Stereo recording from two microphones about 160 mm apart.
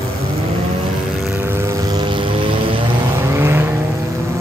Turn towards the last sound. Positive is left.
turn(degrees=-15)  # may be behind; listen again after turning